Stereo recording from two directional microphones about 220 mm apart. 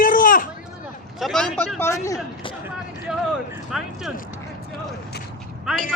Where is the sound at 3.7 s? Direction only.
Centre (ahead or behind).